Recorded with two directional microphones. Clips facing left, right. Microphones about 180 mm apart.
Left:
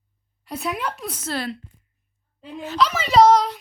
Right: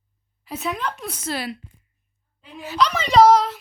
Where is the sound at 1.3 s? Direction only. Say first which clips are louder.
Even; 10° right (ahead or behind).